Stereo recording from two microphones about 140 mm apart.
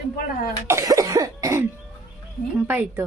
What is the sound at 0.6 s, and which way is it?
Cough, 20° right (ahead or behind).